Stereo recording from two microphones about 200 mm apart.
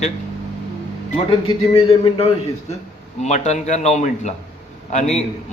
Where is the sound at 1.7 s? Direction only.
30° left (ahead or behind).